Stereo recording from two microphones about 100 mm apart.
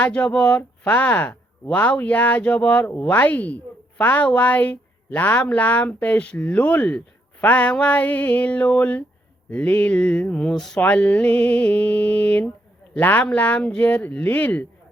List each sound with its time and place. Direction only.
0.0 s speech: 15° left (ahead or behind)